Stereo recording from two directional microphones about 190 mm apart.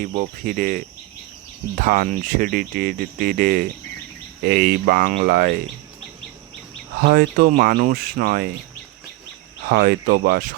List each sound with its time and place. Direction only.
0.0 s speech: 45° right (ahead or behind)
7.0 s speech: 50° right (ahead or behind)
9.6 s speech: 55° right (ahead or behind)